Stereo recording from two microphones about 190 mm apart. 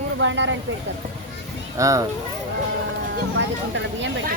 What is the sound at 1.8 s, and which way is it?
Speech, 15° right (ahead or behind).